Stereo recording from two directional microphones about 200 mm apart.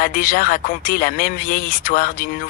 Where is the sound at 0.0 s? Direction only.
45° left (ahead or behind).